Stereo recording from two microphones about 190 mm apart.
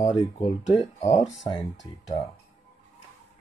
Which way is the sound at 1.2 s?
15° left (ahead or behind).